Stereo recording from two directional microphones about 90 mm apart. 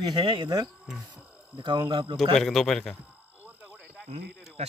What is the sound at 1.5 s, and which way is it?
Speech, 60° right (ahead or behind).